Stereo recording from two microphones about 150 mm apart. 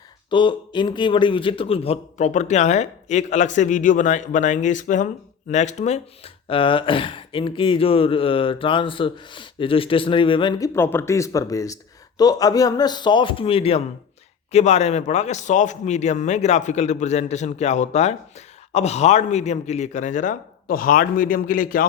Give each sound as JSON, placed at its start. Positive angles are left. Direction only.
{"t": 0.3, "sound": "a man's voice", "side_deg": 30}
{"t": 10.6, "sound": "a man's voice", "side_deg": 15}